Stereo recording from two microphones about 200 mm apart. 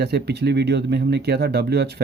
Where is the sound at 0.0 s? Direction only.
55° right (ahead or behind).